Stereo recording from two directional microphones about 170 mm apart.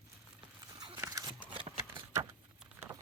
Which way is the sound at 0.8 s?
20° right (ahead or behind).